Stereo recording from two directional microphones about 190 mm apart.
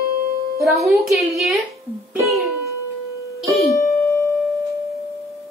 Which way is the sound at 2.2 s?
Centre (ahead or behind).